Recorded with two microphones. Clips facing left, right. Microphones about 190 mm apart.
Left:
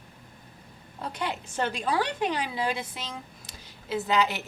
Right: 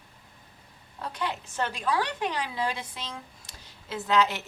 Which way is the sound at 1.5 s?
15° left (ahead or behind).